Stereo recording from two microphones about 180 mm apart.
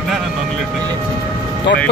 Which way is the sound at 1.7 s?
75° left (ahead or behind).